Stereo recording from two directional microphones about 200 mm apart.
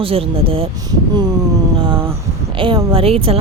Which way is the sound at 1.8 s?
25° right (ahead or behind).